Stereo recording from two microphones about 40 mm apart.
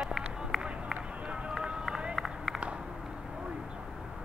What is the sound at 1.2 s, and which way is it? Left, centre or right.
Music, right.